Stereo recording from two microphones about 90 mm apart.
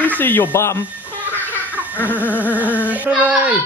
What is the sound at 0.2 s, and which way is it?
Speech, 20° left (ahead or behind).